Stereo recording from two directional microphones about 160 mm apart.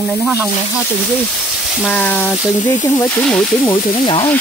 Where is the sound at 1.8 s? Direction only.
10° left (ahead or behind).